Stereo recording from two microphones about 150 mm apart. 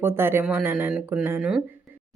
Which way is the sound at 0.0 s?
15° right (ahead or behind).